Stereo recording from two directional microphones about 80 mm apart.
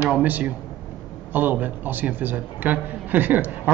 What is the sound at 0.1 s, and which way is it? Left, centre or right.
Speech, centre.